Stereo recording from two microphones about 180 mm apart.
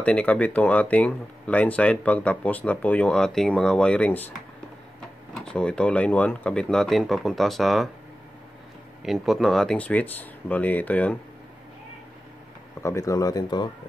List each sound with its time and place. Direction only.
0.0 s speech: 5° left (ahead or behind)
5.3 s speech: 5° left (ahead or behind)
9.0 s speech: centre (ahead or behind)
12.8 s speech: 15° left (ahead or behind)